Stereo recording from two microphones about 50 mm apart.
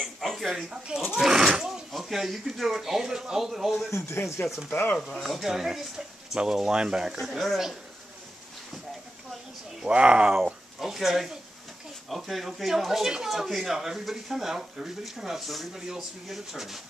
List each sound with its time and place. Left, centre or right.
0.4 s speech: centre
0.7 s speech: centre
4.2 s speech: left
5.2 s speech: centre
7.2 s speech: centre
9.8 s speech: centre
10.3 s speech: centre